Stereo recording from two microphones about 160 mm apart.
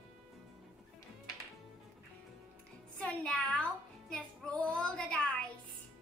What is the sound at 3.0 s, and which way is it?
Music, 5° left (ahead or behind).